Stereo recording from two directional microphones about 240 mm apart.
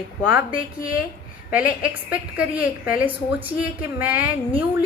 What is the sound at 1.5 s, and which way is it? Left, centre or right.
A woman's voice, centre.